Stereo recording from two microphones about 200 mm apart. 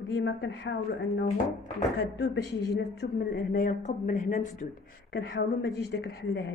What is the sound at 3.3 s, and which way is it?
A woman's voice, 45° left (ahead or behind).